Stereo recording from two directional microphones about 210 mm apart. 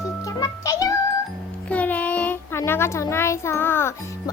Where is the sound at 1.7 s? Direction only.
5° left (ahead or behind).